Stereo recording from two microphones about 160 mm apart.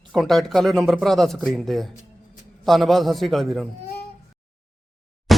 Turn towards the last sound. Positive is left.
turn(degrees=0)  # may be behind; listen again after turning